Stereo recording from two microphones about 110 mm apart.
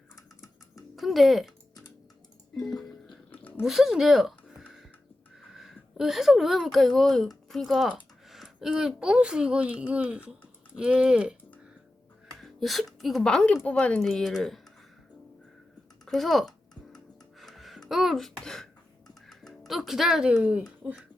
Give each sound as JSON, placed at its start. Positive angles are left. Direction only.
{"t": 0.9, "sound": "speech", "side_deg": 0}
{"t": 2.6, "sound": "music", "side_deg": 5}
{"t": 3.6, "sound": "speech", "side_deg": -5}
{"t": 16.0, "sound": "tick-tock", "side_deg": 0}
{"t": 17.4, "sound": "music", "side_deg": 0}
{"t": 18.4, "sound": "speech", "side_deg": 5}
{"t": 19.3, "sound": "music", "side_deg": 0}
{"t": 20.3, "sound": "speech", "side_deg": -15}